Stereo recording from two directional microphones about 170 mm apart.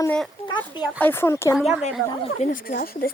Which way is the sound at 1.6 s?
5° right (ahead or behind).